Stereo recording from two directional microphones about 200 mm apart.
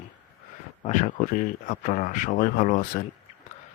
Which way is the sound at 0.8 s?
40° left (ahead or behind).